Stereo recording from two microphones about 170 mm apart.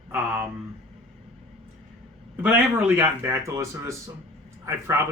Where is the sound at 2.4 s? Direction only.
15° right (ahead or behind).